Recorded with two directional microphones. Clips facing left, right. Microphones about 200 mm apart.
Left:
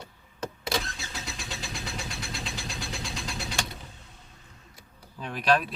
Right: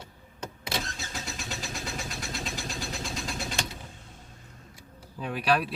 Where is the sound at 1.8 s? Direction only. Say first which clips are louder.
Right 1 dB; 45° right (ahead or behind).